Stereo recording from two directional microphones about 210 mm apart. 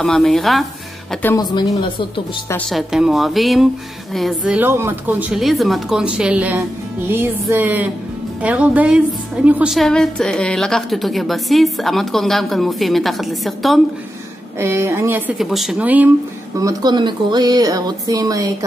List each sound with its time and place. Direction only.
0.0 s a woman's voice: centre (ahead or behind)
1.2 s speech: 15° left (ahead or behind)
2.5 s a woman's voice: centre (ahead or behind)
14.6 s speech: 10° right (ahead or behind)
16.5 s speech: 15° right (ahead or behind)